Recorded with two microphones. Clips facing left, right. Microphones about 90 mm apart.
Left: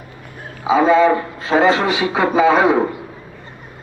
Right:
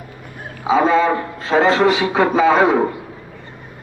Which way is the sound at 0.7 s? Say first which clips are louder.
Left 2 dB; 15° left (ahead or behind).